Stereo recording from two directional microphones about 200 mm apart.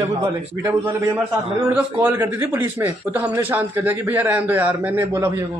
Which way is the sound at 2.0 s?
10° right (ahead or behind).